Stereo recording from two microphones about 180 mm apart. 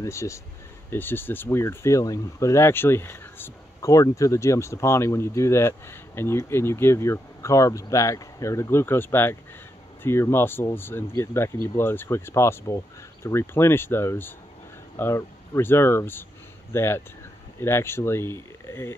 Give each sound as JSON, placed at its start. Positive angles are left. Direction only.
{"t": 0.0, "sound": "speech", "side_deg": 15}